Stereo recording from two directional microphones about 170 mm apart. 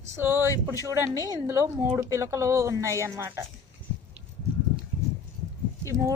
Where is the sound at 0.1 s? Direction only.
15° right (ahead or behind).